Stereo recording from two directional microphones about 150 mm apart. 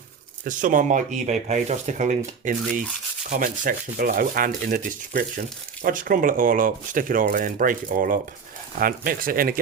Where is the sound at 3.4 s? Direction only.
65° right (ahead or behind).